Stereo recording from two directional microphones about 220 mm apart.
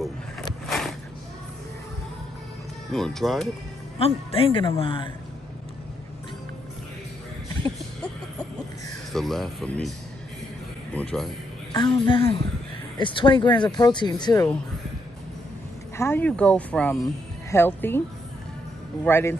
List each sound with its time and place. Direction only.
0.7 s a sound: centre (ahead or behind)
2.9 s speech: centre (ahead or behind)
4.0 s speech: 25° left (ahead or behind)
9.1 s speech: centre (ahead or behind)
11.7 s speech: 20° left (ahead or behind)
16.0 s speech: 10° left (ahead or behind)
19.0 s speech: 10° left (ahead or behind)